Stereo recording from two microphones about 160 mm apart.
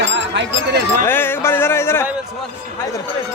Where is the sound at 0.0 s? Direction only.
90° right.